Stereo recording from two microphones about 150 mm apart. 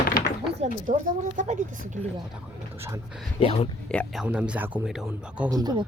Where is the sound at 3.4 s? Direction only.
40° left (ahead or behind).